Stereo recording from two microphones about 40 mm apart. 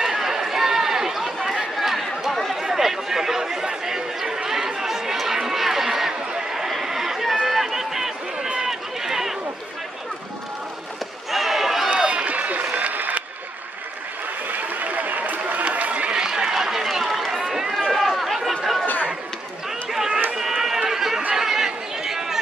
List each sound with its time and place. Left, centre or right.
0.0 s chatter: centre
6.8 s a sound: centre
7.4 s run: centre
8.4 s run: right
8.6 s run: centre
11.2 s crowd: centre
11.9 s applause: right
14.7 s run: right
16.2 s a sound: centre
16.5 s run: centre
18.1 s chatter: centre
19.9 s run: centre
21.4 s chatter: centre